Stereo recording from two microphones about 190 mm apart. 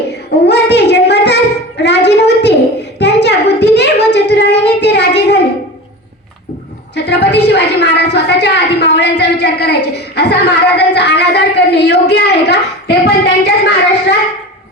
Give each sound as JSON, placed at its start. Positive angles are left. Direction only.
{"t": 0.1, "sound": "child singing", "side_deg": 60}
{"t": 1.8, "sound": "a sound", "side_deg": 65}
{"t": 3.0, "sound": "child singing", "side_deg": 65}
{"t": 6.9, "sound": "a woman's voice", "side_deg": 60}